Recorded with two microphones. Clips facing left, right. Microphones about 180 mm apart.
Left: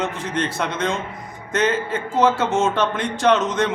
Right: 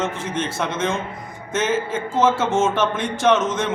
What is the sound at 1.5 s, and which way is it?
A man's voice, 5° right (ahead or behind).